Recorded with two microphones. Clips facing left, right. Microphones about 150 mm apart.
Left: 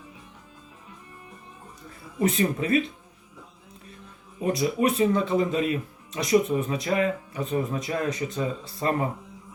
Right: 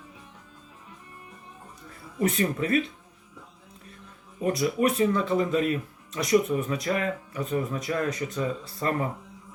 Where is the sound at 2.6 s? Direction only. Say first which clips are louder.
Even; 45° right (ahead or behind).